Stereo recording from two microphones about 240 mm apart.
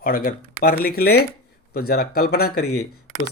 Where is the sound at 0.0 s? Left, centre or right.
Left.